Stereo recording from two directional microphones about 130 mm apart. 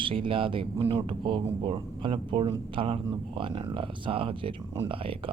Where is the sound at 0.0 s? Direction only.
40° right (ahead or behind).